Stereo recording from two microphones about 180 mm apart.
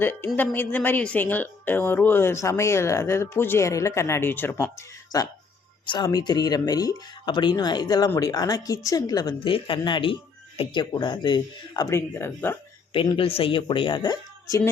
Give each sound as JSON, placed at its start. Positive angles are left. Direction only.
{"t": 0.0, "sound": "speech", "side_deg": 10}
{"t": 12.9, "sound": "speech", "side_deg": 30}